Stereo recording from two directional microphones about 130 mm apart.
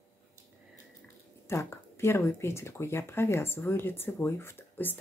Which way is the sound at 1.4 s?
20° left (ahead or behind).